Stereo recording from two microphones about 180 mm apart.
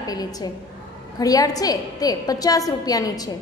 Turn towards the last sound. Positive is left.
turn(degrees=20)  # may be behind; listen again after turning